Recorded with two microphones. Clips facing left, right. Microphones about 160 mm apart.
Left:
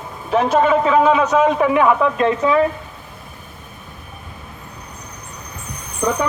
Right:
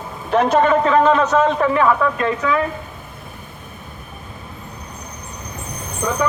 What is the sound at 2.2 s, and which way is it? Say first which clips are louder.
Stir: left 3 dB; 25° left (ahead or behind).